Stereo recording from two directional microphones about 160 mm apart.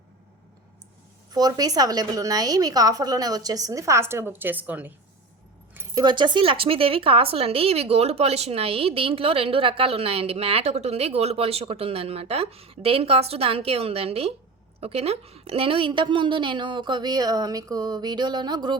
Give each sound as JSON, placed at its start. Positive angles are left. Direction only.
{"t": 1.3, "sound": "a woman's voice", "side_deg": -25}
{"t": 5.7, "sound": "a woman's voice", "side_deg": -20}